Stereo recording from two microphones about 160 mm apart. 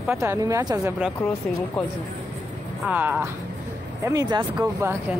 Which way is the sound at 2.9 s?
10° right (ahead or behind).